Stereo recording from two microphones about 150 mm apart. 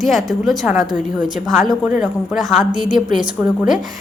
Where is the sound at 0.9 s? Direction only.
60° left (ahead or behind).